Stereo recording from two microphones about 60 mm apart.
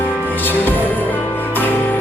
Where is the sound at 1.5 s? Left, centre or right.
Left.